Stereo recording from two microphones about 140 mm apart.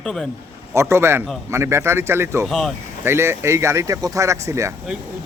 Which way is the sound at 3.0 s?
15° right (ahead or behind).